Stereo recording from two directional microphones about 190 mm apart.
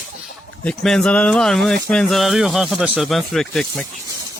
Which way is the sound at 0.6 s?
5° left (ahead or behind).